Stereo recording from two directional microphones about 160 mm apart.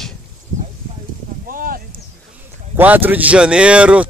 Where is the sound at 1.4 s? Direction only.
60° right (ahead or behind).